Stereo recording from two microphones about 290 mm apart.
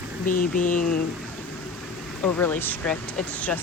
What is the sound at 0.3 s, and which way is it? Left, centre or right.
Speech, left.